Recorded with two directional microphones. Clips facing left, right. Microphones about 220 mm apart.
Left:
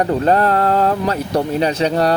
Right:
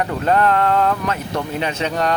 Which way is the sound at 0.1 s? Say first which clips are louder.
Left 3 dB; 35° left (ahead or behind).